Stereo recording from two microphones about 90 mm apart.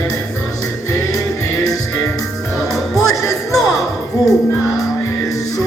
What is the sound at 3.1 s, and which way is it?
Music, 40° left (ahead or behind).